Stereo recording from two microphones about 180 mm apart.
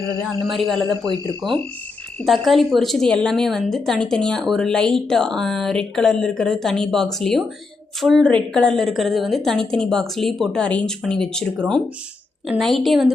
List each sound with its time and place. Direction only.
0.4 s a woman's voice: centre (ahead or behind)
1.0 s speech: 25° right (ahead or behind)
2.2 s a woman's voice: centre (ahead or behind)
12.5 s a woman's voice: centre (ahead or behind)